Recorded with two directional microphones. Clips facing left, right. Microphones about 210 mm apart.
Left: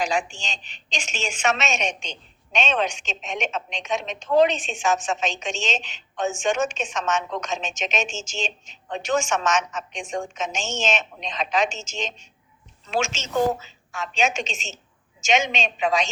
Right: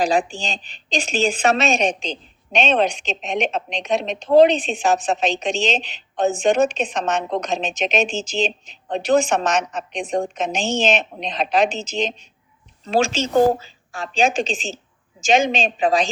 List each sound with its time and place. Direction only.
0.0 s a woman's voice: 35° right (ahead or behind)